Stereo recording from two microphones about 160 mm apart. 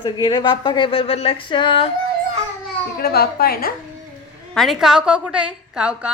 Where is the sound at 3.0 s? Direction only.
75° left (ahead or behind).